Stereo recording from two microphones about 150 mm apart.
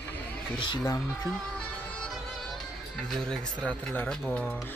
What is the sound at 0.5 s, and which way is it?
Speech, 30° left (ahead or behind).